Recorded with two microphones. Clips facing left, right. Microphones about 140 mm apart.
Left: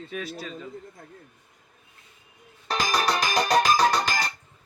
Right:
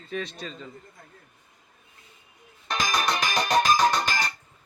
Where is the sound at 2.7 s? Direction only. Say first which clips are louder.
Left 2 dB; 35° left (ahead or behind).